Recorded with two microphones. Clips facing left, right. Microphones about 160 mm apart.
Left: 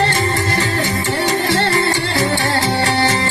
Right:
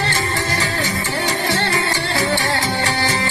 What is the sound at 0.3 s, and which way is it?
Music, 40° left (ahead or behind).